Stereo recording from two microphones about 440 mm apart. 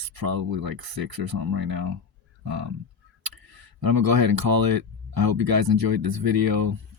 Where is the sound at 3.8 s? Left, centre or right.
Right.